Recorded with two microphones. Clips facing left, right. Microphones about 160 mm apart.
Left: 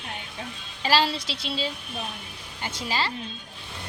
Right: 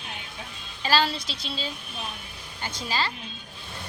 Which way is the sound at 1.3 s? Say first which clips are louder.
Left 3 dB; 85° left.